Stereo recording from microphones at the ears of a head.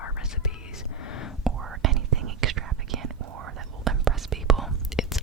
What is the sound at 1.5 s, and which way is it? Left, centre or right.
Whispering, right.